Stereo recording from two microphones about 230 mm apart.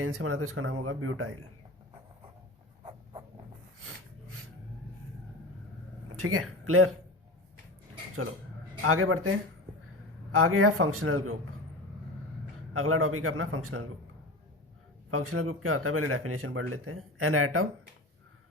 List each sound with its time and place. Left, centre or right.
0.0 s speech: right
2.8 s writing: right
6.1 s speech: right
8.8 s speech: right
10.3 s speech: right
12.7 s speech: right
15.1 s speech: right